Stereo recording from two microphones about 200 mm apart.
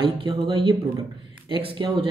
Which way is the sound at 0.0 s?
25° right (ahead or behind).